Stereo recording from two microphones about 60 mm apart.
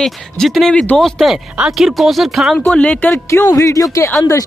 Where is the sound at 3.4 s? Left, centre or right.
Left.